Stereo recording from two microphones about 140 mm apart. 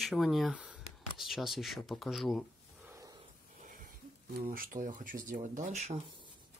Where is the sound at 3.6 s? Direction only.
80° right.